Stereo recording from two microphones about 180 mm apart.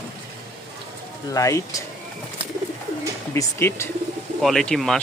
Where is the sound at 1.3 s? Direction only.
15° left (ahead or behind).